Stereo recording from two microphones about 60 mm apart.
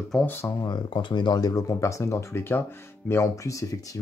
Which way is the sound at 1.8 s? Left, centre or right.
Left.